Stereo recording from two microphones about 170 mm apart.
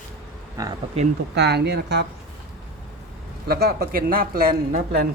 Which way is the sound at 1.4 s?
75° right (ahead or behind).